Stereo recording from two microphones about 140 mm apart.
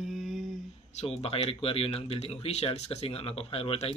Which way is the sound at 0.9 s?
45° left (ahead or behind).